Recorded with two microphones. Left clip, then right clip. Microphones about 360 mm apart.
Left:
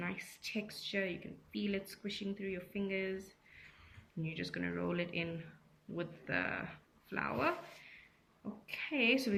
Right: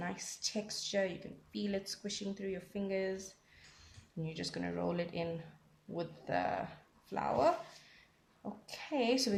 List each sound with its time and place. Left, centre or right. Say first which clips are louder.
0.0 s speech: right 2 dB; centre
4.2 s speech: even; centre
8.6 s speech: left 1 dB; centre